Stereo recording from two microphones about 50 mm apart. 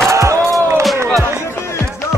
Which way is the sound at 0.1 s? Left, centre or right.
Right.